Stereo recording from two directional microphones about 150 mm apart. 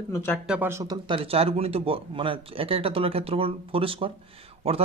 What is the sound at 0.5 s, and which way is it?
Speech, 15° right (ahead or behind).